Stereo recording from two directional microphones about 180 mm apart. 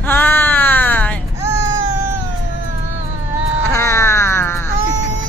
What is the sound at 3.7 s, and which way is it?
Music, 15° left (ahead or behind).